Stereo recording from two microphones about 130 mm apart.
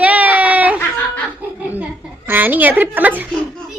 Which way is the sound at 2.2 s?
15° right (ahead or behind).